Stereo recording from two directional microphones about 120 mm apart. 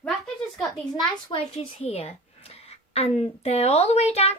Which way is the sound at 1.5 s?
55° left (ahead or behind).